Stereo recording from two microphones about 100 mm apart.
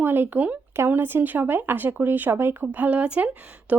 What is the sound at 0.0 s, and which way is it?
Speech, 20° right (ahead or behind).